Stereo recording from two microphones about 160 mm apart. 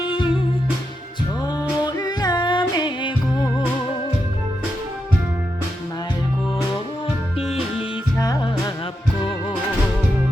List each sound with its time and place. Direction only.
0.0 s music: 30° left (ahead or behind)
7.3 s music: 40° left (ahead or behind)
8.2 s music: 25° left (ahead or behind)